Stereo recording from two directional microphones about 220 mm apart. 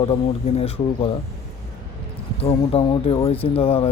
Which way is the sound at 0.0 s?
25° left (ahead or behind).